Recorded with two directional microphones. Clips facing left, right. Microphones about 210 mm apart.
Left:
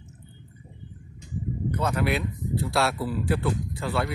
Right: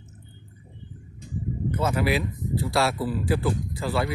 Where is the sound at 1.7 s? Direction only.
5° right (ahead or behind).